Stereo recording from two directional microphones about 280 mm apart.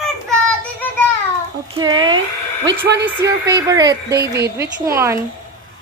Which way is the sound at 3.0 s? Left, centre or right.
Centre.